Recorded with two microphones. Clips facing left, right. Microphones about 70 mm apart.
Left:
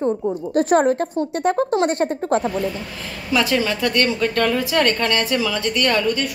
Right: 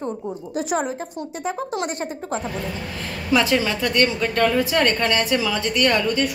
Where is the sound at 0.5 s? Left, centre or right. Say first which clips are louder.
Left 8 dB; left.